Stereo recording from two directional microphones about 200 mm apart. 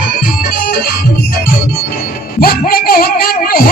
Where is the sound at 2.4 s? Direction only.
50° left (ahead or behind).